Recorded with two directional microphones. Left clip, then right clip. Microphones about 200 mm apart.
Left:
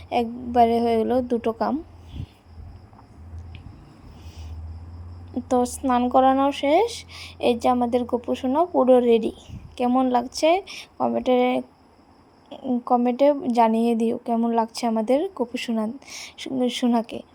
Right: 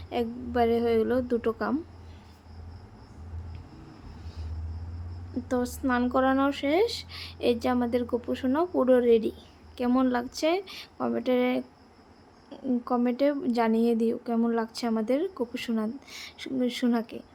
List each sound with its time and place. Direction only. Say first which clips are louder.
0.1 s speech: left 7 dB; 20° left (ahead or behind)
5.5 s a woman's voice: left 7 dB; 20° left (ahead or behind)